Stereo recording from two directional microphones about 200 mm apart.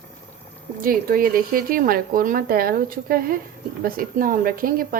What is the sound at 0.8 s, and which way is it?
A woman's voice, 45° right (ahead or behind).